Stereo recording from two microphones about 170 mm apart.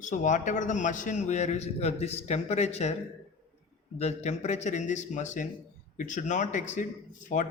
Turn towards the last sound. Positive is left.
turn(degrees=45)  # may be behind; listen again after turning